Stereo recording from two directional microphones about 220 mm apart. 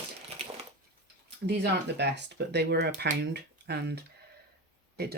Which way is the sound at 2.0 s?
50° right (ahead or behind).